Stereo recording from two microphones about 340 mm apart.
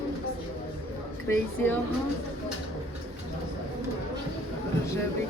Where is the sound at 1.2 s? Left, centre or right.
Centre.